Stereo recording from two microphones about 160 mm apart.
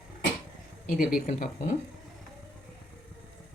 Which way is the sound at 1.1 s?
60° left (ahead or behind).